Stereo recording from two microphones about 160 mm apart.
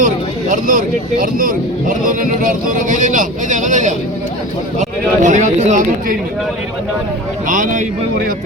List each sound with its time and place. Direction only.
0.0 s speech: 55° right (ahead or behind)
7.4 s speech: 55° right (ahead or behind)